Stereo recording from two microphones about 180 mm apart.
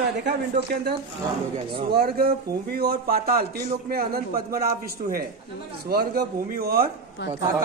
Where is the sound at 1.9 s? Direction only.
60° right (ahead or behind).